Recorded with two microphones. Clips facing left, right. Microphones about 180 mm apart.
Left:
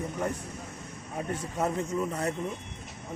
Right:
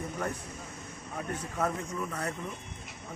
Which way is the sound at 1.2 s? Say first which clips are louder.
Left 2 dB; 30° left (ahead or behind).